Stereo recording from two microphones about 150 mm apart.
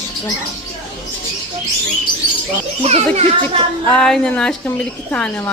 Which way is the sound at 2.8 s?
45° right (ahead or behind).